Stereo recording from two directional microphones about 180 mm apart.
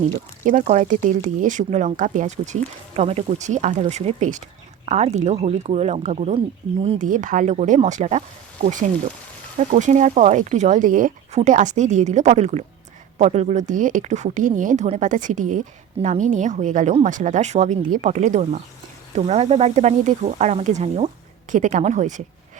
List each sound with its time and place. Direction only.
0.4 s speech: 45° right (ahead or behind)
7.1 s speech: 45° right (ahead or behind)